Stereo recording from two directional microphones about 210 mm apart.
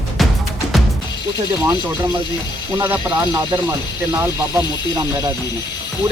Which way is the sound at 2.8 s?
15° right (ahead or behind).